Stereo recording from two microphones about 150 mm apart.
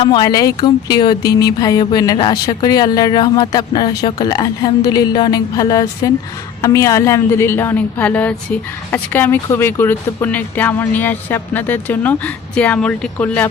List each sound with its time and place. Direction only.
0.0 s a woman's voice: 30° left (ahead or behind); by 13.5 s 10° left (ahead or behind)